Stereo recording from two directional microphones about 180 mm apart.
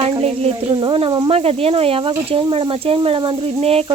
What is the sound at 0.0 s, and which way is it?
Speech, 30° right (ahead or behind).